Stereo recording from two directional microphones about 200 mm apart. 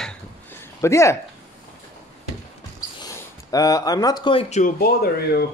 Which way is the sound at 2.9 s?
15° left (ahead or behind).